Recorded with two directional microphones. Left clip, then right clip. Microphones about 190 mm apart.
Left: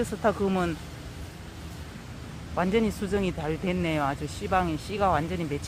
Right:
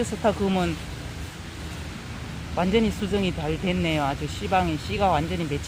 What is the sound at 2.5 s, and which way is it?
Speech, 10° left (ahead or behind).